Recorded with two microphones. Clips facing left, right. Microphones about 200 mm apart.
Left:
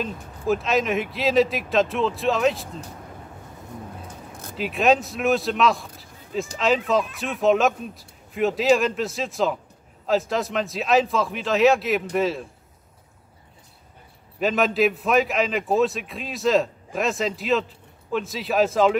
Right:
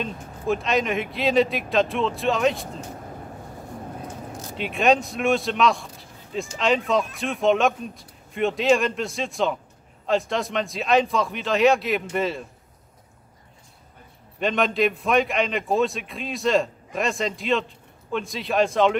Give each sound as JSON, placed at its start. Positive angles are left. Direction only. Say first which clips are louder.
{"t": 0.0, "sound": "a man's voice", "louder": "left 1 dB", "side_deg": 0}
{"t": 4.3, "sound": "a sound", "louder": "right 4 dB", "side_deg": 55}
{"t": 4.6, "sound": "a man's voice", "louder": "left 1 dB", "side_deg": 0}
{"t": 14.4, "sound": "a man's voice", "louder": "left 1 dB", "side_deg": 5}